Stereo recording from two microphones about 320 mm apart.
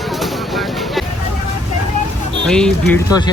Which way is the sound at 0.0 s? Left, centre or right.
Centre.